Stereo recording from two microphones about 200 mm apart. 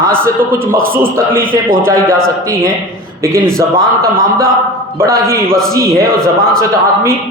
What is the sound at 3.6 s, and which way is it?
Speech, 15° right (ahead or behind).